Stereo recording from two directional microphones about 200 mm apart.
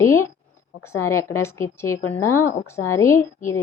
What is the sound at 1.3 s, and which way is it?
A woman's voice, 15° left (ahead or behind).